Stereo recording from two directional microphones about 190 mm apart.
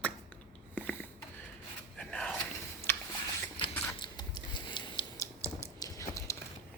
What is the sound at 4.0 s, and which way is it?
Typing, 20° left (ahead or behind).